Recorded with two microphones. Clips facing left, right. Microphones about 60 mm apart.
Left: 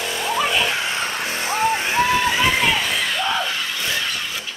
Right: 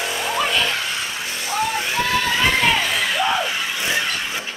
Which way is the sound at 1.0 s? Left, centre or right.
Left.